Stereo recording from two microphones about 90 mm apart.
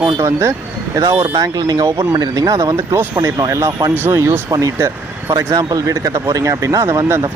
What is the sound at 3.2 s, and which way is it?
Speech, 40° right (ahead or behind).